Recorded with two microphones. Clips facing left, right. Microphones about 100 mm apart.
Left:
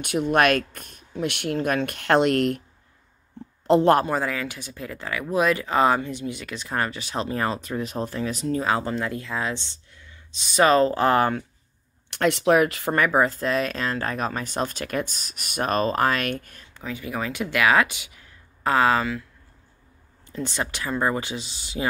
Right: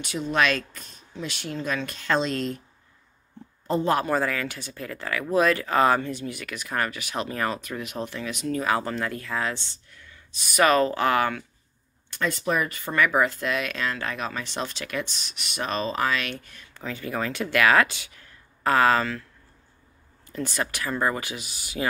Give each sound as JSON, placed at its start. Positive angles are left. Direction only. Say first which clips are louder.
{"t": 0.0, "sound": "speech", "louder": "left 4 dB", "side_deg": 60}
{"t": 3.6, "sound": "a man's voice", "louder": "left 8 dB", "side_deg": 75}
{"t": 4.0, "sound": "speech", "louder": "even", "side_deg": 20}
{"t": 12.1, "sound": "speech", "louder": "left 7 dB", "side_deg": 70}
{"t": 12.9, "sound": "speech", "louder": "even", "side_deg": 35}
{"t": 16.7, "sound": "speech", "louder": "even", "side_deg": 10}
{"t": 20.2, "sound": "speech", "louder": "even", "side_deg": 20}